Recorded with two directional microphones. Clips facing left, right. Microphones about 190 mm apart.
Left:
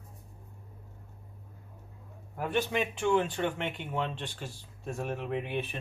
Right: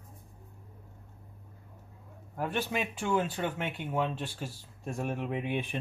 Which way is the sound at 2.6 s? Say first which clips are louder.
Left 5 dB; 5° right (ahead or behind).